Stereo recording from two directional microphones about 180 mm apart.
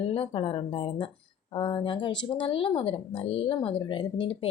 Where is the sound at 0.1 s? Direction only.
30° left (ahead or behind).